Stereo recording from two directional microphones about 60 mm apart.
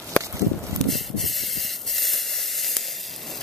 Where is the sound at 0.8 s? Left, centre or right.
Centre.